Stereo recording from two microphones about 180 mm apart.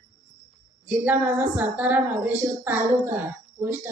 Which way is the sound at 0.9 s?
10° right (ahead or behind).